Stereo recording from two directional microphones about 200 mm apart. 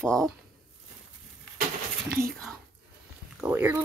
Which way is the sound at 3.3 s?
10° right (ahead or behind).